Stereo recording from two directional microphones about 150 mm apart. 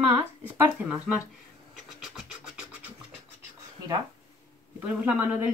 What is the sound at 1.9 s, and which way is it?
Scratch, 5° right (ahead or behind).